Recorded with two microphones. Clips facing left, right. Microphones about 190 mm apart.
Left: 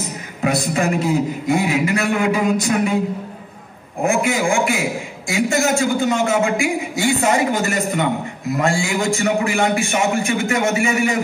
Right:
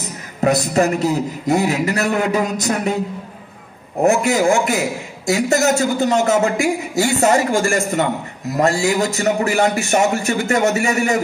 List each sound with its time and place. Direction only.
0.4 s a man's voice: 40° right (ahead or behind)
4.0 s a man's voice: 40° right (ahead or behind)